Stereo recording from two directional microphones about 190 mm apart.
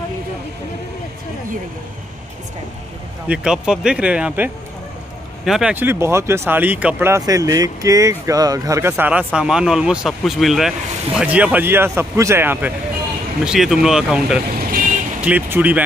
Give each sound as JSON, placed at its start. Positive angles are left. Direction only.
{"t": 3.3, "sound": "speech", "side_deg": -5}
{"t": 14.6, "sound": "vehicle", "side_deg": -50}
{"t": 15.2, "sound": "speech", "side_deg": -10}